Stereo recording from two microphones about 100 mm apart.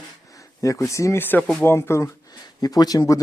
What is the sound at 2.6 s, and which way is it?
Speech, 40° left (ahead or behind).